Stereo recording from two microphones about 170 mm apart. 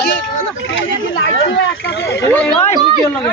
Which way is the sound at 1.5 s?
85° left.